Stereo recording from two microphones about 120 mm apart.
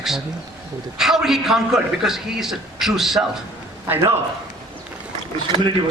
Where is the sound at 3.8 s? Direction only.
15° right (ahead or behind).